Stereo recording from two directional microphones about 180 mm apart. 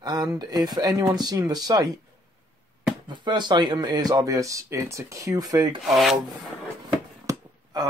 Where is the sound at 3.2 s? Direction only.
25° right (ahead or behind).